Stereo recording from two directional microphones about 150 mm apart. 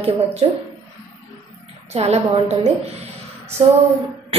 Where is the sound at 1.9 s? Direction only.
45° right (ahead or behind).